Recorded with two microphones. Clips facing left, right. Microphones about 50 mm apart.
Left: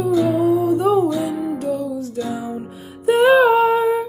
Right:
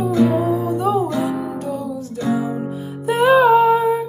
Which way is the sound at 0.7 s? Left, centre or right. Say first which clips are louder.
Left 2 dB; left.